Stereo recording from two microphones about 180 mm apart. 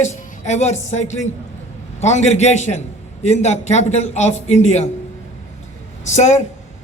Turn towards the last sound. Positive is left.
turn(degrees=40)  # may be behind; listen again after turning